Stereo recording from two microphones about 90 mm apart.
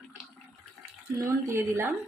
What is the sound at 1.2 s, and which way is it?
Speech, 30° right (ahead or behind).